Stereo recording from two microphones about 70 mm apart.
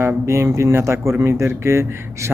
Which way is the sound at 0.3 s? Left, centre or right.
Right.